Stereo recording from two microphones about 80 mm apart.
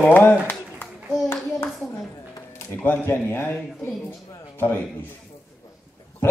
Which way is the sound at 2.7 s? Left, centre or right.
Left.